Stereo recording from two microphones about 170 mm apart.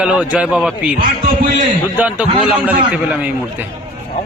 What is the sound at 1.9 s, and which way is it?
A man's voice, 10° right (ahead or behind).